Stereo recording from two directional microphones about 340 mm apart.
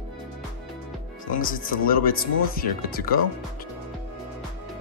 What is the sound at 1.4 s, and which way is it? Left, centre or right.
Speech, left.